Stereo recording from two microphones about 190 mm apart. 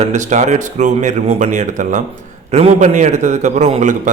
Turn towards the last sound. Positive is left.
turn(degrees=-40)  # may be behind; listen again after turning